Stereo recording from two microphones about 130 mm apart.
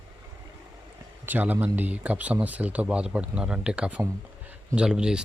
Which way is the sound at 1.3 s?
15° right (ahead or behind).